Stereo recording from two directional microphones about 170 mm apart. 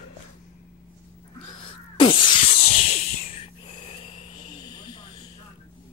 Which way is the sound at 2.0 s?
30° left (ahead or behind).